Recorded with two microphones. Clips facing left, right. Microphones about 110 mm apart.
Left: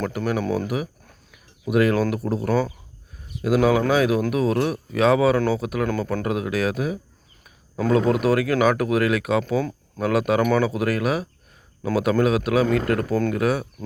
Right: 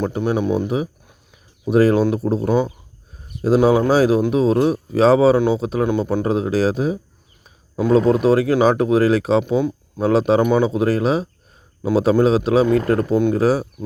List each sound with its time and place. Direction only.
0.0 s speech: 25° right (ahead or behind)
9.4 s speech: 20° right (ahead or behind)